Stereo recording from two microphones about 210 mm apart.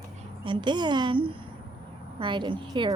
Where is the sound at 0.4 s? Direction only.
20° right (ahead or behind).